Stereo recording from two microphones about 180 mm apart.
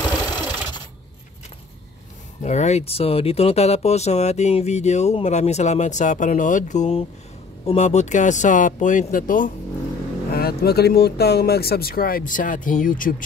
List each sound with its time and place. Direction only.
0.4 s a sound: 25° left (ahead or behind)
2.4 s speech: 40° left (ahead or behind)
10.3 s speech: 60° left (ahead or behind)